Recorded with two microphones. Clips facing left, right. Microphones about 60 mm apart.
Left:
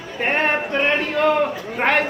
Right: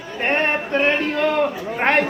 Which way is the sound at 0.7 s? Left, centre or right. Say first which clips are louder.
Right 1 dB; centre.